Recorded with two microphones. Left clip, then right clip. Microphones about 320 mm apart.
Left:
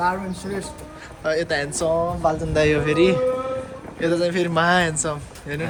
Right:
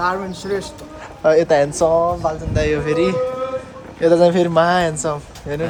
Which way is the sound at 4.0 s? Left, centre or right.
Centre.